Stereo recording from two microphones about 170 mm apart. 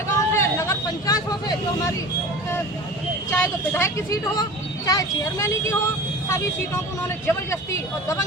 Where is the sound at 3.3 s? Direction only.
15° left (ahead or behind).